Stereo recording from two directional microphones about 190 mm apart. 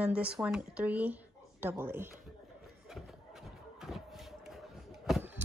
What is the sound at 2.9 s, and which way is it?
Shuffle, centre (ahead or behind).